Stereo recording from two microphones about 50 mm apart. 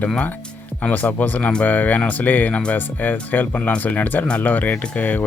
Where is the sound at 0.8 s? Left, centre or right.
Left.